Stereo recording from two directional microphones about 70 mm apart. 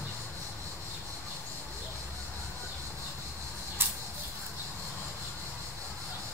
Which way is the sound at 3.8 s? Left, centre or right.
Right.